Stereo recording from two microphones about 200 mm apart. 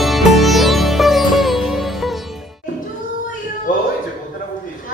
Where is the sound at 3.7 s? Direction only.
45° left (ahead or behind).